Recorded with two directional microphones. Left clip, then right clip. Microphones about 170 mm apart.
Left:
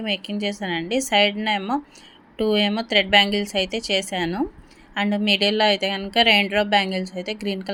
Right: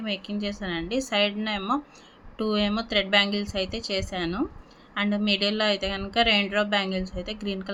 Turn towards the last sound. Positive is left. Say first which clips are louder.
# left 5 dB
turn(degrees=15)  # may be behind; listen again after turning